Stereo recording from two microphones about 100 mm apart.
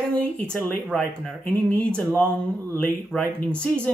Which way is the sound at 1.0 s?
10° left (ahead or behind).